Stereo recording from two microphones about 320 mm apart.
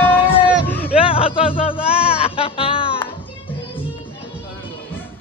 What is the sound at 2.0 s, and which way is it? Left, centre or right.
Music, centre.